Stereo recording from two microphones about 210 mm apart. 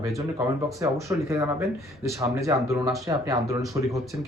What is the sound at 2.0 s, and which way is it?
Speech, 15° right (ahead or behind).